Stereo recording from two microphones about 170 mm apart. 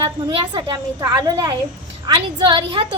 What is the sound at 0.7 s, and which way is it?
A woman's voice, 20° right (ahead or behind).